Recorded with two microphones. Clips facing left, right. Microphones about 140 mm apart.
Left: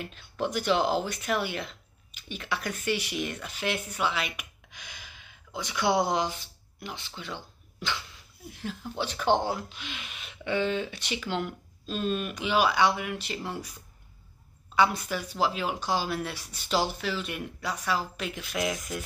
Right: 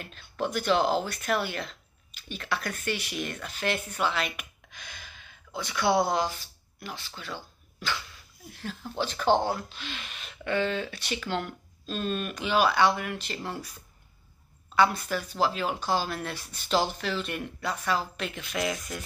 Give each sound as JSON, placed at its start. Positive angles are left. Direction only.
{"t": 0.0, "sound": "speech", "side_deg": 15}
{"t": 14.8, "sound": "speech", "side_deg": 15}